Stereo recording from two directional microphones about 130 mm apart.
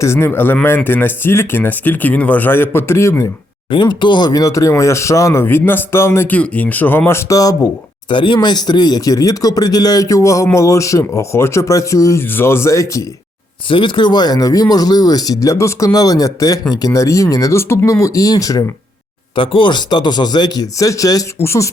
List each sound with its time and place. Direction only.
0.0 s speech: 20° left (ahead or behind)
3.7 s a man's voice: 35° left (ahead or behind)
8.1 s a man's voice: 40° left (ahead or behind)
13.7 s a man's voice: 40° left (ahead or behind)
19.4 s speech: 40° left (ahead or behind); by 21.7 s 20° left (ahead or behind)